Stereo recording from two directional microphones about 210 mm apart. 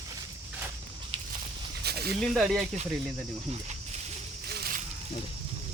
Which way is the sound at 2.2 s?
Centre (ahead or behind).